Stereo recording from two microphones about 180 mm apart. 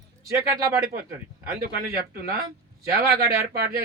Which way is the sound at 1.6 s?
55° right (ahead or behind).